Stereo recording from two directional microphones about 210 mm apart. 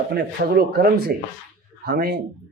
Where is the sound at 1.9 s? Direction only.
50° right (ahead or behind).